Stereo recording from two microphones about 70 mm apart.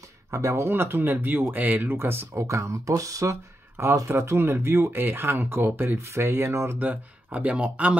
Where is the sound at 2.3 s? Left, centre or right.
Right.